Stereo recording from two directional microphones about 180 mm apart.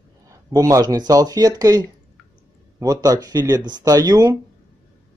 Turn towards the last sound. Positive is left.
turn(degrees=-20)  # may be behind; listen again after turning